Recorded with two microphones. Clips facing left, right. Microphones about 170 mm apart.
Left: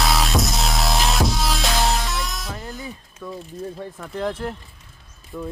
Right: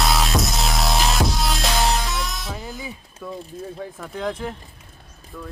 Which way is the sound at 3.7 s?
Centre (ahead or behind).